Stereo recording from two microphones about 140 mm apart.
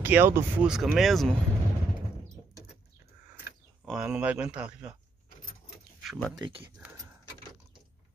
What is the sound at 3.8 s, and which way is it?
Speech, 5° right (ahead or behind).